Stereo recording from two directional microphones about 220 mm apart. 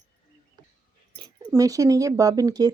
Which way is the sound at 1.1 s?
20° right (ahead or behind).